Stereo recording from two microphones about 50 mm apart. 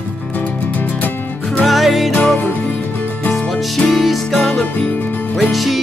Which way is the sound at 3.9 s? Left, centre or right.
Centre.